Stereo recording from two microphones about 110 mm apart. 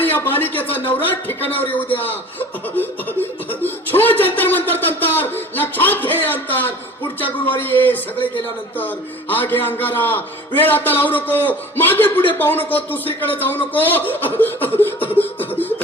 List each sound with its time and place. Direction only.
0.0 s a sound: 20° left (ahead or behind)
1.0 s a man's voice: 15° left (ahead or behind)
2.7 s snicker: 15° left (ahead or behind)
7.2 s a man's voice: 15° left (ahead or behind)
9.3 s a man's voice: 20° left (ahead or behind)